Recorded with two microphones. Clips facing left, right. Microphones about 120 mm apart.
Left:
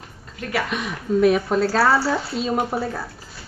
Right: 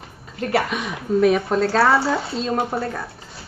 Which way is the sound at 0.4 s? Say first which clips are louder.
Right 5 dB; 35° right (ahead or behind).